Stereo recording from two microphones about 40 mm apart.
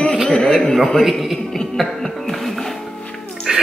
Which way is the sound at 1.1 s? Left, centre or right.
Centre.